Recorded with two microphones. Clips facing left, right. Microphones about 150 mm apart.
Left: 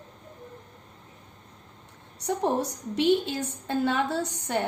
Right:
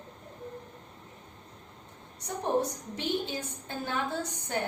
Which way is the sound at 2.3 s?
75° left (ahead or behind).